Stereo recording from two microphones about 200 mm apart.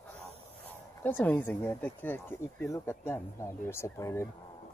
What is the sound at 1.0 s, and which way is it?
Speech, 10° left (ahead or behind).